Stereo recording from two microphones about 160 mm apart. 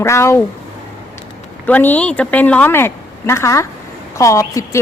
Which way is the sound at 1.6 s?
10° left (ahead or behind).